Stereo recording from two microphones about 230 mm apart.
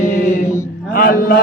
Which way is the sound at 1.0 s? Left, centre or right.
Left.